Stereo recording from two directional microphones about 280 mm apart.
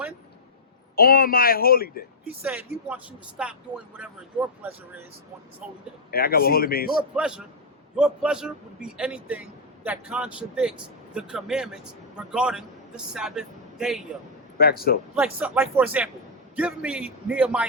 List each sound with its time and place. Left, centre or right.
0.9 s speech: left
2.4 s a man's voice: centre
6.1 s speech: left
7.2 s a man's voice: centre
14.6 s speech: left
15.1 s a man's voice: centre